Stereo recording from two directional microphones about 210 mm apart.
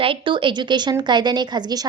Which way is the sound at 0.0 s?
25° right (ahead or behind).